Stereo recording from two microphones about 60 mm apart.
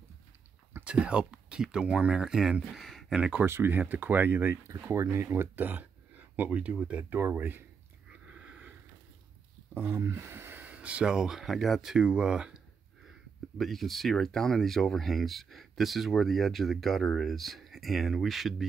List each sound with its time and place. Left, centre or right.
0.8 s speech: centre
2.7 s a sound: centre
3.4 s speech: right
5.6 s speech: right
7.1 s speech: right
8.3 s sniff: centre
9.8 s speech: right
10.7 s speech: right
13.6 s speech: centre